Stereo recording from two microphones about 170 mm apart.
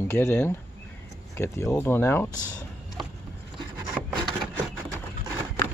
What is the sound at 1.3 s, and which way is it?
Speech, 15° left (ahead or behind).